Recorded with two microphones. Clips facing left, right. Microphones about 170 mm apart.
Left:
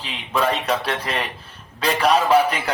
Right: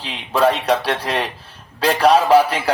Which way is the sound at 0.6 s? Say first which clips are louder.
Right 4 dB; 35° right (ahead or behind).